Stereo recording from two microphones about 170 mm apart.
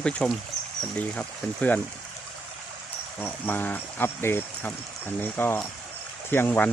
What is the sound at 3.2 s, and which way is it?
Speech, 10° left (ahead or behind).